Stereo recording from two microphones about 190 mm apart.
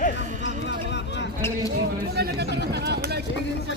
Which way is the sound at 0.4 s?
65° left (ahead or behind).